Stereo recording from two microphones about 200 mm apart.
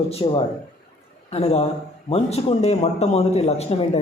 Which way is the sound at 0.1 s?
25° left (ahead or behind).